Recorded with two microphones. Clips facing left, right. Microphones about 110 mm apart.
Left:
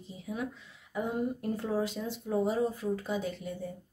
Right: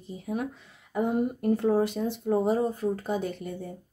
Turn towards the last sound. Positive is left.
turn(degrees=-55)  # may be behind; listen again after turning